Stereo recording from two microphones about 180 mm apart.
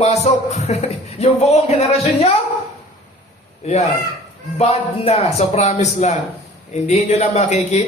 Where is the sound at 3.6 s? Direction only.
35° left (ahead or behind).